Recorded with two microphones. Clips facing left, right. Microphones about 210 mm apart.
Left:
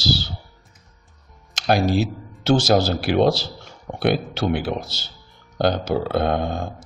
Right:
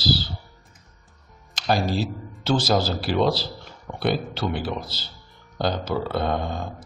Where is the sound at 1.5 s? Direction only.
70° left (ahead or behind).